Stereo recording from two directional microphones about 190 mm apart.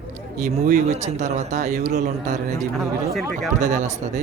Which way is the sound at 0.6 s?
40° right (ahead or behind).